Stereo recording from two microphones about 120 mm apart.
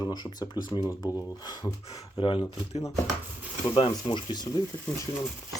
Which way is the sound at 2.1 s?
50° left (ahead or behind).